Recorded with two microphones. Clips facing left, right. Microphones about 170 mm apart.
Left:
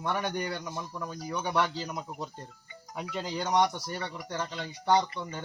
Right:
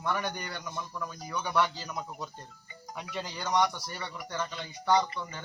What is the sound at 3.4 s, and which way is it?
A man's voice, 25° left (ahead or behind).